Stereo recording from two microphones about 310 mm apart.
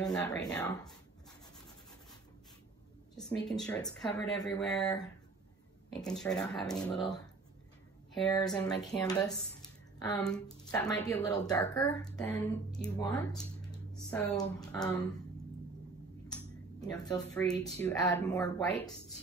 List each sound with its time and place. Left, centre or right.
0.0 s speech: centre
3.4 s speech: centre
5.9 s speech: centre
8.8 s speech: centre
16.8 s speech: centre